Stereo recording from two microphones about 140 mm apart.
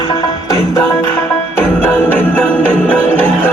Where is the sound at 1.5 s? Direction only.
15° left (ahead or behind).